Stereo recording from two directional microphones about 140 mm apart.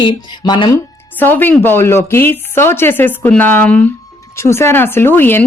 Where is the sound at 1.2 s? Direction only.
15° left (ahead or behind).